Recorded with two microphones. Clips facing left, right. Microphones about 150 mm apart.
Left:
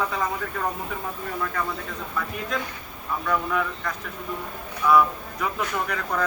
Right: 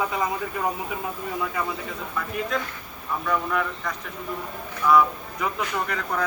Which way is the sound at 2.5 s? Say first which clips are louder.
Right 1 dB; centre (ahead or behind).